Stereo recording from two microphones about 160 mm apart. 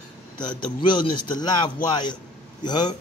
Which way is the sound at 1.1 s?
30° left (ahead or behind).